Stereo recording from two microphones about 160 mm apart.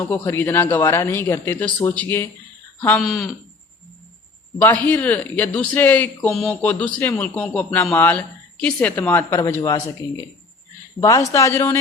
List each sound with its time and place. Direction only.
0.0 s a man's voice: 15° left (ahead or behind)
4.5 s a man's voice: 10° left (ahead or behind)